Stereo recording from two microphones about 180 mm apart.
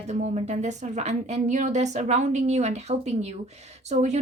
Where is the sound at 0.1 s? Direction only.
40° right (ahead or behind).